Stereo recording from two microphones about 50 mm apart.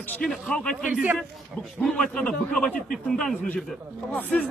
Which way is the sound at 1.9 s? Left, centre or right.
Centre.